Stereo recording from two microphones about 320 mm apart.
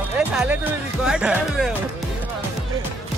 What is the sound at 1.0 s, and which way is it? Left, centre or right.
Speech, centre.